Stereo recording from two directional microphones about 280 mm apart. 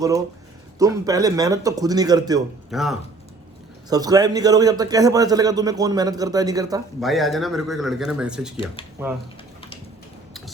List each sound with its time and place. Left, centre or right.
0.8 s a man's voice: centre
2.6 s speech: centre
3.8 s a man's voice: centre
7.0 s speech: centre
8.5 s speech: centre